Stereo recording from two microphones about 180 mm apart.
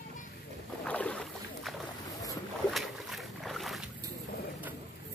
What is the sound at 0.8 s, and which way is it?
Boat, 5° left (ahead or behind).